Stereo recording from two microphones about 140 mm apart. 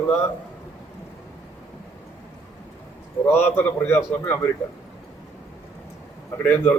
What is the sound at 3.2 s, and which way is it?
A man's voice, 15° left (ahead or behind).